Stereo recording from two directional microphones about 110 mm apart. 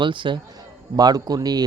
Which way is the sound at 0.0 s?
45° right (ahead or behind).